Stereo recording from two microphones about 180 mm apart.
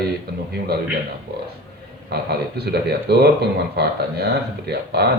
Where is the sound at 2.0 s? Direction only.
65° right (ahead or behind).